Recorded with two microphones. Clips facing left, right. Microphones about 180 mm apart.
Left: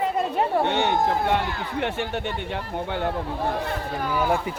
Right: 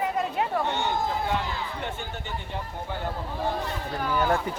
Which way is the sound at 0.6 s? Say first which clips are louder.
Left 5 dB; 70° left (ahead or behind).